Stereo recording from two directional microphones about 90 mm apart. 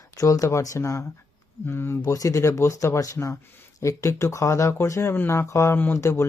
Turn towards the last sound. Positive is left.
turn(degrees=30)  # may be behind; listen again after turning